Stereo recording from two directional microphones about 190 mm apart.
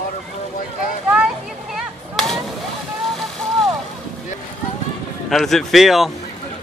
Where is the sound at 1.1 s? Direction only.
5° right (ahead or behind).